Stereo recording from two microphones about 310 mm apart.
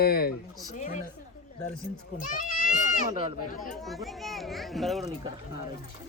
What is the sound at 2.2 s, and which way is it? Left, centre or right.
Children playing, left.